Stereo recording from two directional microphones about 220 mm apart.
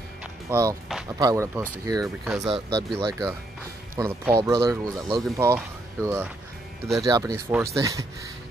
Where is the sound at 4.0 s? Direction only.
10° right (ahead or behind).